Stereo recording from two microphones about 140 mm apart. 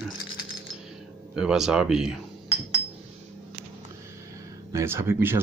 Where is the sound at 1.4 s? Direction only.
5° right (ahead or behind).